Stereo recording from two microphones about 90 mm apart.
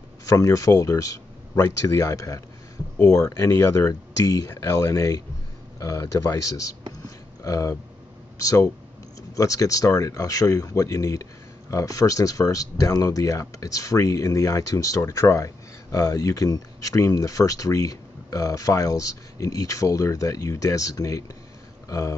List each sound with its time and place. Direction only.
0.4 s speech: 40° left (ahead or behind)
7.0 s a sound: 40° left (ahead or behind)
8.4 s speech: 35° left (ahead or behind)